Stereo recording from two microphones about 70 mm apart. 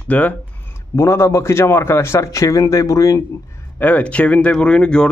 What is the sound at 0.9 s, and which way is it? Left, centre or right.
A man's voice, left.